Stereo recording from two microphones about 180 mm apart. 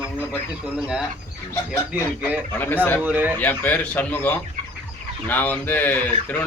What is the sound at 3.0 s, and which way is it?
Speech, 10° right (ahead or behind).